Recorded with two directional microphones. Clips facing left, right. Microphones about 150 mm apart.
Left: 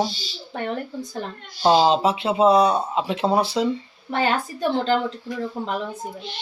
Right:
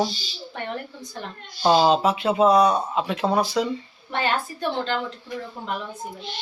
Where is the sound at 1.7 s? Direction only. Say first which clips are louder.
Left 1 dB; 25° left (ahead or behind).